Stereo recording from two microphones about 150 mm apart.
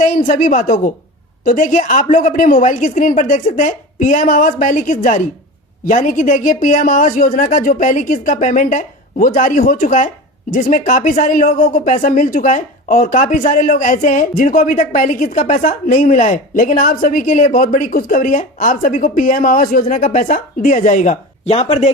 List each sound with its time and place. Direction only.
0.0 s a woman's voice: 60° left (ahead or behind)
21.5 s speech: 45° left (ahead or behind)